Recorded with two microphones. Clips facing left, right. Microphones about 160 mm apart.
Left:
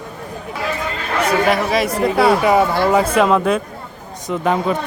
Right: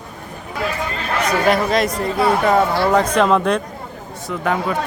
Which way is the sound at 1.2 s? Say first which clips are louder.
Left 1 dB; 5° left (ahead or behind).